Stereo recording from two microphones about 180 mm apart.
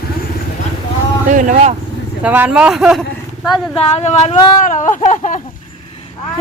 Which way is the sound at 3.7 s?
35° left (ahead or behind).